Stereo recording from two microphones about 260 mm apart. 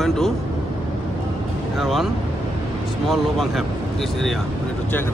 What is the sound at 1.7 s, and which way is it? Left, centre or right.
Speech, centre.